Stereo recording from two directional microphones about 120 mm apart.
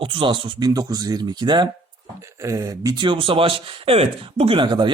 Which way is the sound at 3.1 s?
45° right (ahead or behind).